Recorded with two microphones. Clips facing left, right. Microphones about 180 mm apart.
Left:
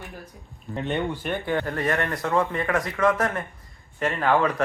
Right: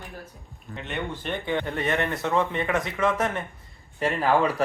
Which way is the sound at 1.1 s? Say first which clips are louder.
Left 2 dB; 10° left (ahead or behind).